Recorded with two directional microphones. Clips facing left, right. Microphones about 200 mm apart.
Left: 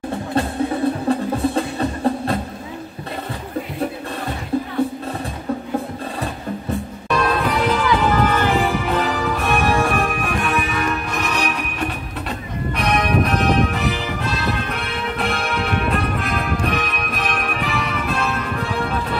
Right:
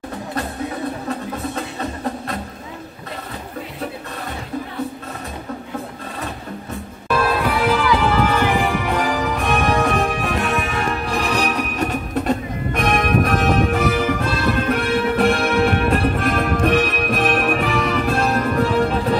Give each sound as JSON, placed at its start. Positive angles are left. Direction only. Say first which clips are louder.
{"t": 1.1, "sound": "music", "louder": "left 9 dB", "side_deg": 30}
{"t": 7.1, "sound": "music", "louder": "right 1 dB", "side_deg": -5}